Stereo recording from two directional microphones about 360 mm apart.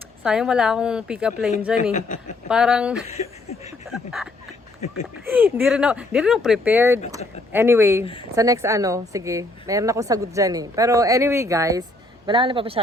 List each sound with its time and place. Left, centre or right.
0.2 s speech: centre
1.9 s speech: centre
2.5 s speech: centre
3.2 s speech: centre
3.8 s speech: centre
5.3 s a woman's voice: centre